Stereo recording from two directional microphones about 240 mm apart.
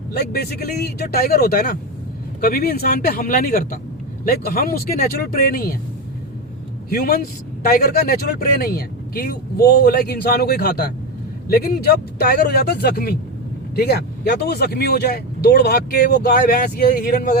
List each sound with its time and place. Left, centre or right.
0.1 s speech: left
6.9 s speech: left